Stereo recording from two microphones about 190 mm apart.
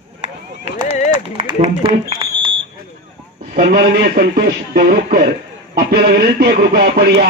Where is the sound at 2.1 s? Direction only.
25° right (ahead or behind).